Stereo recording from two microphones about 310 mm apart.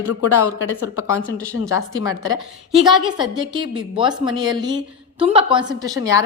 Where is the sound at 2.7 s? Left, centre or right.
Centre.